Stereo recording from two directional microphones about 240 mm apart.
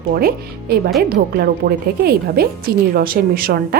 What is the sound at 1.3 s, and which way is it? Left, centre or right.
A woman's voice, right.